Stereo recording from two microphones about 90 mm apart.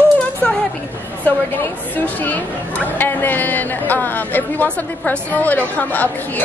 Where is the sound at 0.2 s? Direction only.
10° left (ahead or behind).